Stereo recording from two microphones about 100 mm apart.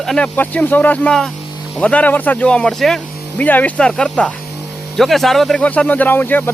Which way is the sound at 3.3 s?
15° left (ahead or behind).